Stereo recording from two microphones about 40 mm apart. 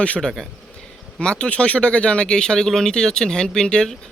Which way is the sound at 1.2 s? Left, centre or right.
Left.